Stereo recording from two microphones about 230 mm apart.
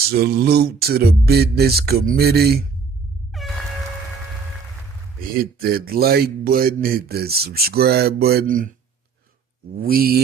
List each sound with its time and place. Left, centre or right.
0.1 s a sound: right
3.3 s air horn: centre
5.4 s speech: right
9.7 s speech: right